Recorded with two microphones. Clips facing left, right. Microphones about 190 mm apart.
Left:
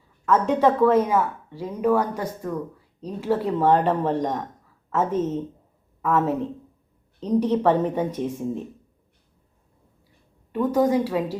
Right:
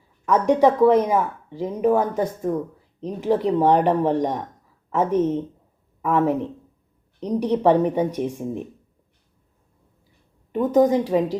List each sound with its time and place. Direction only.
0.3 s a woman's voice: 15° right (ahead or behind)
10.5 s a woman's voice: 20° right (ahead or behind)